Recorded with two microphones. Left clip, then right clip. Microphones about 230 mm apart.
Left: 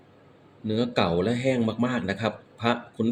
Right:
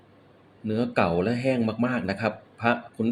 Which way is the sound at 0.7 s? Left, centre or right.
Centre.